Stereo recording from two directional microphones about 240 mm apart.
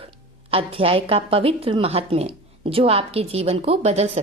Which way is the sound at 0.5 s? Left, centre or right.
Right.